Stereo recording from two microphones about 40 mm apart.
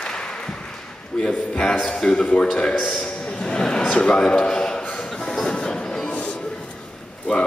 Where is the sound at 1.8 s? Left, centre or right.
Centre.